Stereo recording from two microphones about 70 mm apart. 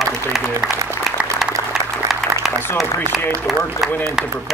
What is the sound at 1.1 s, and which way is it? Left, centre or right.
Applause, centre.